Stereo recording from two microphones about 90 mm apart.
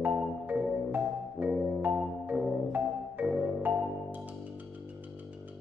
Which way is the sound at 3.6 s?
20° right (ahead or behind).